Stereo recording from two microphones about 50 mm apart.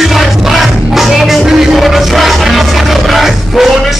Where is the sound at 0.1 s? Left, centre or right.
Centre.